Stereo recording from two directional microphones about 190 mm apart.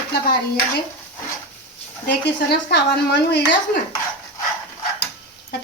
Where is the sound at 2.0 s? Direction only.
65° left (ahead or behind).